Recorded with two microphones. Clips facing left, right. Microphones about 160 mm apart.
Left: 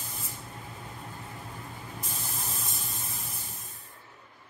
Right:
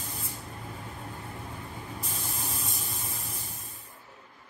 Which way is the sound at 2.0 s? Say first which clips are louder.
Right 2 dB; centre (ahead or behind).